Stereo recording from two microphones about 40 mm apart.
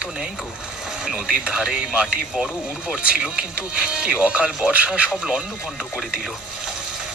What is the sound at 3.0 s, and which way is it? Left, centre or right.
Speech, right.